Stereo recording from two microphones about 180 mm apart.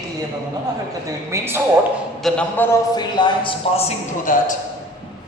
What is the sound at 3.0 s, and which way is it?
Speech, 25° left (ahead or behind).